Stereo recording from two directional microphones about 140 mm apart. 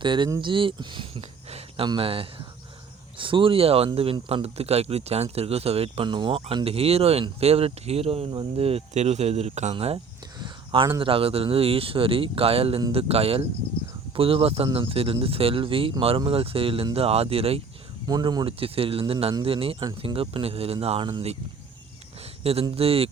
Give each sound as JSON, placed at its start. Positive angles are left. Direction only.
{"t": 0.0, "sound": "speech", "side_deg": -35}
{"t": 10.4, "sound": "a sound", "side_deg": -35}
{"t": 11.0, "sound": "speech", "side_deg": -40}
{"t": 18.0, "sound": "speech", "side_deg": -30}
{"t": 18.6, "sound": "speech", "side_deg": -40}
{"t": 22.7, "sound": "speech", "side_deg": -45}